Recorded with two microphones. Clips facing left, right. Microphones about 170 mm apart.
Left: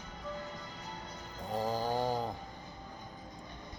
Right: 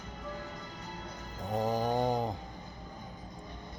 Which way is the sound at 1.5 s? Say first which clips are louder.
Right 3 dB; 20° right (ahead or behind).